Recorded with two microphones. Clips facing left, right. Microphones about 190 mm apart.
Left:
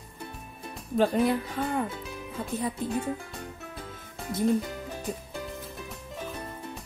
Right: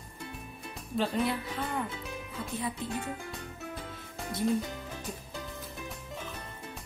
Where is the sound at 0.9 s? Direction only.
50° left (ahead or behind).